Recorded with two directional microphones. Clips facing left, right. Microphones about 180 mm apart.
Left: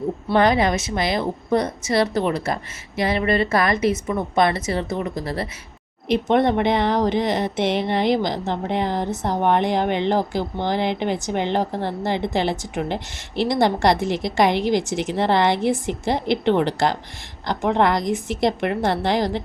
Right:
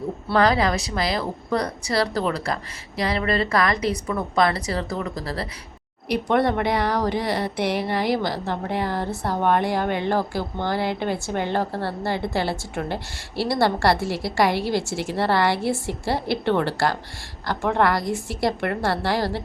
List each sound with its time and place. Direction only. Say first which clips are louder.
0.3 s speech: left 2 dB; 20° left (ahead or behind)